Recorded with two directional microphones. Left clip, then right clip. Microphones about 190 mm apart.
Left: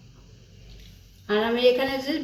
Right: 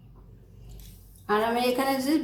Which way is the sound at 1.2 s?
55° right (ahead or behind).